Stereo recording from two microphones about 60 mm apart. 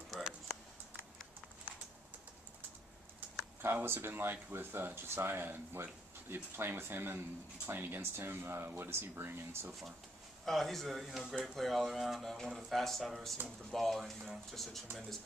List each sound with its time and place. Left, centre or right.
3.6 s speech: right
9.7 s speech: centre